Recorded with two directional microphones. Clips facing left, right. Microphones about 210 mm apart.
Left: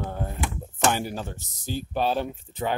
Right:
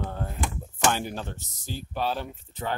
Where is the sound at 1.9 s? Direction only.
20° left (ahead or behind).